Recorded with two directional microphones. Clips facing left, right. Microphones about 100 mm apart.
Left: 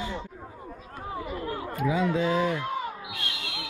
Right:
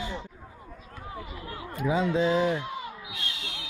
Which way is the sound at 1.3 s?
45° left (ahead or behind).